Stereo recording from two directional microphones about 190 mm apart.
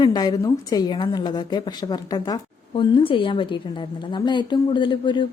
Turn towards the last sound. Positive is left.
turn(degrees=25)  # may be behind; listen again after turning